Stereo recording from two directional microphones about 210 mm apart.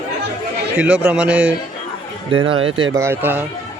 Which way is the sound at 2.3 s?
25° right (ahead or behind).